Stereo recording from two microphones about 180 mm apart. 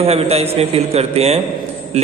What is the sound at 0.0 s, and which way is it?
A man's voice, 35° right (ahead or behind).